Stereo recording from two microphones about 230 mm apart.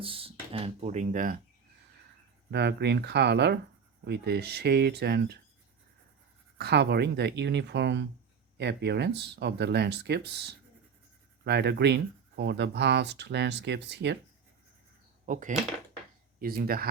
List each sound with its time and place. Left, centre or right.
0.0 s speech: right
2.5 s speech: right
6.6 s speech: right
11.4 s speech: right
15.3 s speech: right